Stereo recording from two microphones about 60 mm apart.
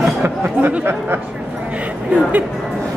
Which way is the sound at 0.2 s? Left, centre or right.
Right.